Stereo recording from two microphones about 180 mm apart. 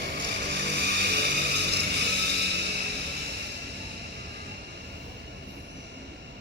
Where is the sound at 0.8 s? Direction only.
65° right (ahead or behind).